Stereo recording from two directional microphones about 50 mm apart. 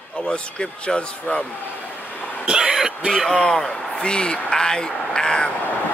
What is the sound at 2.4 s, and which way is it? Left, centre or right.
Speech, centre.